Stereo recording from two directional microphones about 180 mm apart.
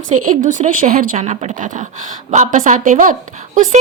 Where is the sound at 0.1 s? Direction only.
45° right (ahead or behind).